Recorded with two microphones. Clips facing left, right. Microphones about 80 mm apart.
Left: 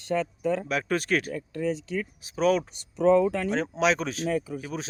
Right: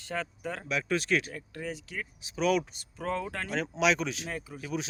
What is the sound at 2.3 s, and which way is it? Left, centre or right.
Speech, left.